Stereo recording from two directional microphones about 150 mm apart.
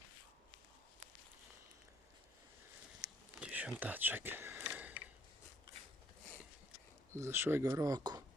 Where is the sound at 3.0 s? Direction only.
25° right (ahead or behind).